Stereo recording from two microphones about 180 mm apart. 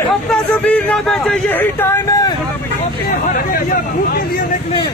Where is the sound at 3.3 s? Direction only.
50° left (ahead or behind).